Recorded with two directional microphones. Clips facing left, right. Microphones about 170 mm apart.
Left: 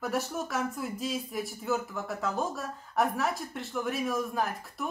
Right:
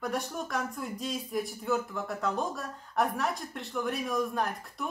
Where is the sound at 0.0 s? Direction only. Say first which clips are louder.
Left 2 dB; 5° left (ahead or behind).